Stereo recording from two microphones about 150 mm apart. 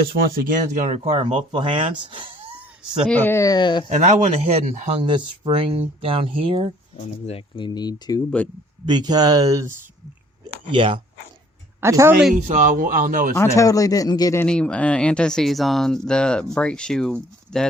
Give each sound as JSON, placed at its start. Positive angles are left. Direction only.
{"t": 0.1, "sound": "speech", "side_deg": -75}
{"t": 3.1, "sound": "a man's voice", "side_deg": 15}
{"t": 3.8, "sound": "speech", "side_deg": -50}
{"t": 5.0, "sound": "speech", "side_deg": -35}
{"t": 6.9, "sound": "speech", "side_deg": 40}
{"t": 8.9, "sound": "speech", "side_deg": -30}
{"t": 10.7, "sound": "speech", "side_deg": -35}
{"t": 11.8, "sound": "speech", "side_deg": -20}
{"t": 12.3, "sound": "a man's voice", "side_deg": -55}
{"t": 13.6, "sound": "a man's voice", "side_deg": 25}
{"t": 14.4, "sound": "speech", "side_deg": 5}